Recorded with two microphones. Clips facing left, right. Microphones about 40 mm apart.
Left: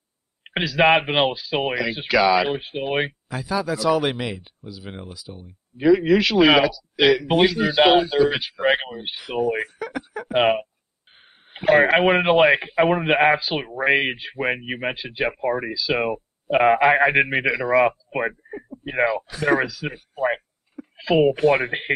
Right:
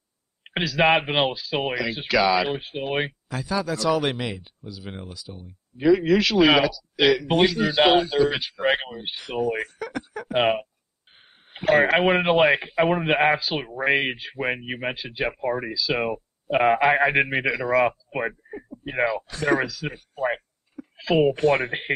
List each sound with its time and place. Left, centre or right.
0.4 s speech: centre